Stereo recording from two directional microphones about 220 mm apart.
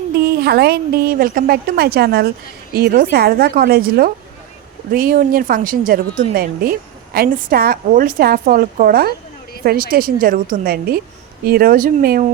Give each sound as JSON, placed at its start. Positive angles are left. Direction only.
{"t": 0.4, "sound": "a woman's voice", "side_deg": -45}